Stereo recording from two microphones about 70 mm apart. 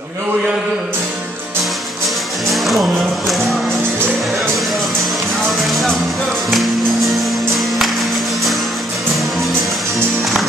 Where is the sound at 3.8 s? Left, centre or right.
Right.